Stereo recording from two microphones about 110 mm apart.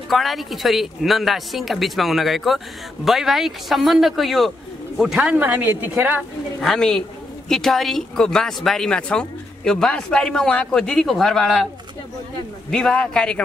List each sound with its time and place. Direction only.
0.1 s a man's voice: centre (ahead or behind); by 6.2 s 15° right (ahead or behind)
6.6 s a man's voice: 5° left (ahead or behind)
12.7 s a man's voice: 5° left (ahead or behind)